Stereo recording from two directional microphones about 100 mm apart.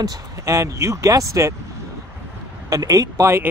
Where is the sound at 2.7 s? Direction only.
40° right (ahead or behind).